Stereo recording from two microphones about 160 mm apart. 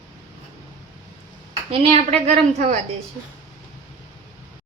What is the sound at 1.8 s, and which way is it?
Speech, 40° right (ahead or behind).